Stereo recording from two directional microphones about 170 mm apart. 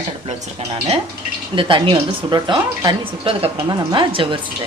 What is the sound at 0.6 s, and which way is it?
A woman's voice, 40° right (ahead or behind).